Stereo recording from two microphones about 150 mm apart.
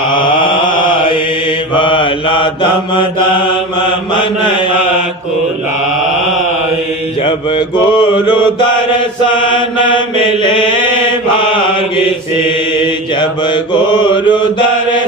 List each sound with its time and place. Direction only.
0.1 s mantra: 30° left (ahead or behind)
7.3 s mantra: 30° left (ahead or behind)
11.3 s mantra: 35° left (ahead or behind)
12.8 s mantra: 30° left (ahead or behind)